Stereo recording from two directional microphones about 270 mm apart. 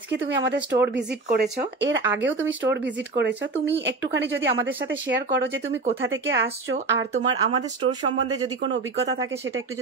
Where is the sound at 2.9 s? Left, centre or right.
Centre.